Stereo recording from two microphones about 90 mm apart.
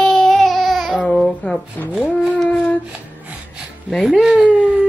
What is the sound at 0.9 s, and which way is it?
Speech, 10° left (ahead or behind).